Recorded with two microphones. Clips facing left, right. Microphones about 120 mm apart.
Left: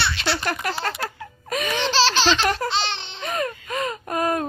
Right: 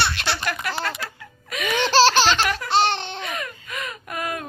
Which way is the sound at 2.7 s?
50° right (ahead or behind).